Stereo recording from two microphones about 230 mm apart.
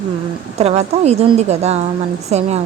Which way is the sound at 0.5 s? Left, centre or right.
Right.